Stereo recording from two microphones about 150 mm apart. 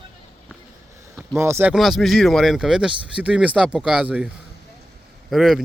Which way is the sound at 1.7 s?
Centre (ahead or behind).